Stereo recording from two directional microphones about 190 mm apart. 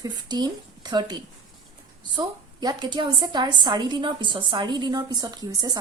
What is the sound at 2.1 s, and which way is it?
A woman's voice, 25° right (ahead or behind).